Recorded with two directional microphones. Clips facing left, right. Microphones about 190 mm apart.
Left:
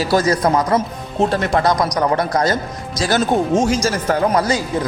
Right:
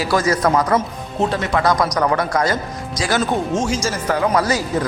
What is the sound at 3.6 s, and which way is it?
Speech, 55° left (ahead or behind).